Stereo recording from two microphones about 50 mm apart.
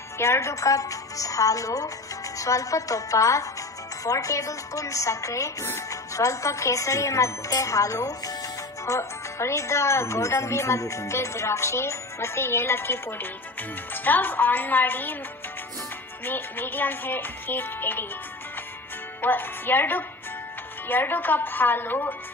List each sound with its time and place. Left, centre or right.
0.2 s speech: left
5.6 s speech: left
8.9 s speech: left
16.2 s speech: left
19.2 s a woman's voice: left